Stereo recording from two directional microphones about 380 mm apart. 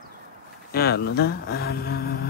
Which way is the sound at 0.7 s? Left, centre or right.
Left.